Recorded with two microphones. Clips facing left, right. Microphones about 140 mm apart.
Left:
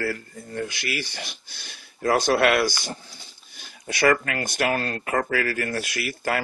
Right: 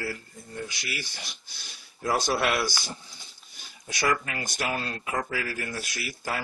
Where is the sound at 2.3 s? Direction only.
65° left (ahead or behind).